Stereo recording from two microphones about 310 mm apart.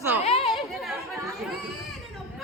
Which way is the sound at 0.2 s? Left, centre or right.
Centre.